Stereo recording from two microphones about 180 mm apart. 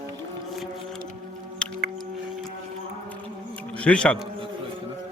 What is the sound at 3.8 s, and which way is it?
Speech, 5° left (ahead or behind).